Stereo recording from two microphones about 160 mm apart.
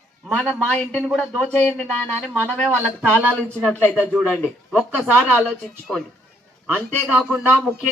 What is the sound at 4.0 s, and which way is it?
Speech, 5° right (ahead or behind).